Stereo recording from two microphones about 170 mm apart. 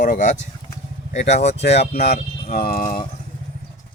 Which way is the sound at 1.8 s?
70° left (ahead or behind).